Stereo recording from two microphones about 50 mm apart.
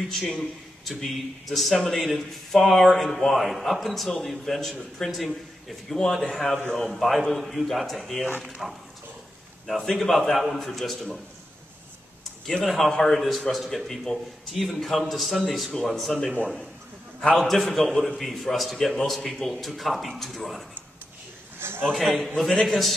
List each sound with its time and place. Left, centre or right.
0.1 s a man's voice: centre
9.8 s a man's voice: centre
12.6 s a man's voice: centre
21.5 s a sound: right
21.9 s a man's voice: centre